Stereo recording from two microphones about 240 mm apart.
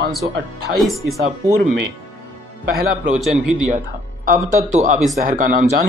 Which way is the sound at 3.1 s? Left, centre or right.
Centre.